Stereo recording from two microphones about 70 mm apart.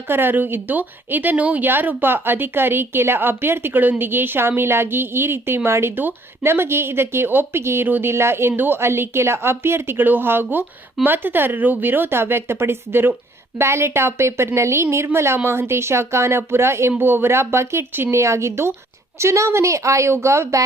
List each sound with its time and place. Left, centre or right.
0.1 s a woman's voice: right